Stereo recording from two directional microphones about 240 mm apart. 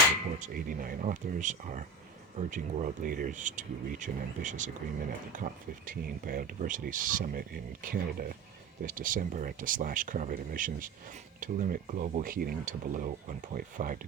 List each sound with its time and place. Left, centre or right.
0.3 s speech: right